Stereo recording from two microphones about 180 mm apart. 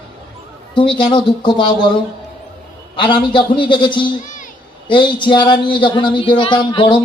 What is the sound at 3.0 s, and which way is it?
Speech, 25° left (ahead or behind).